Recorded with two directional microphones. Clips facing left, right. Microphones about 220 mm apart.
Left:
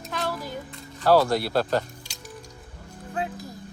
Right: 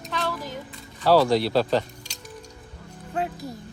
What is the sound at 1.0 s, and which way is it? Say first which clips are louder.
Speech: right 1 dB; 5° left (ahead or behind).